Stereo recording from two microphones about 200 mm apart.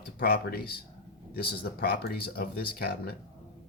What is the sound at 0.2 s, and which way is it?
Speech, 50° left (ahead or behind).